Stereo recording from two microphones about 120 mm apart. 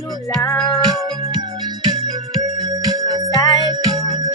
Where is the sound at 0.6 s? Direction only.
Centre (ahead or behind).